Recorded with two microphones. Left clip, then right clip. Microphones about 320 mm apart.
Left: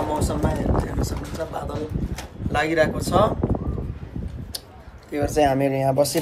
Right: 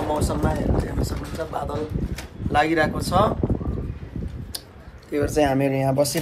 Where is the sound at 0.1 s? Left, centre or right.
Centre.